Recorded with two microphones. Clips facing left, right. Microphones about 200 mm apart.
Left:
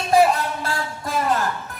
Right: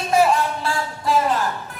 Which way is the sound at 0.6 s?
45° left (ahead or behind).